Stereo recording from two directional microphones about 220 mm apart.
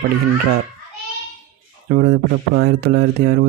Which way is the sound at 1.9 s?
45° right (ahead or behind).